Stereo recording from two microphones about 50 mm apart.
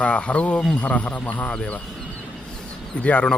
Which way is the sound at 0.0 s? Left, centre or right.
Left.